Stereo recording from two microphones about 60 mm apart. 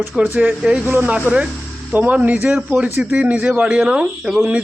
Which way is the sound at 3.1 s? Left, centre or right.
Right.